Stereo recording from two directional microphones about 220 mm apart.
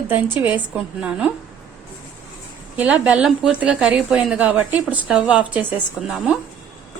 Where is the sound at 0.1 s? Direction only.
10° right (ahead or behind).